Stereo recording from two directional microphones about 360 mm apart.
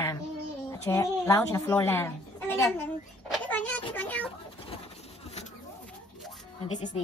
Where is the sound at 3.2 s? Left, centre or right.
Centre.